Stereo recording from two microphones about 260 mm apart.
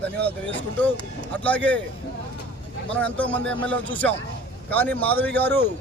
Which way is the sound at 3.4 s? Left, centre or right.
Right.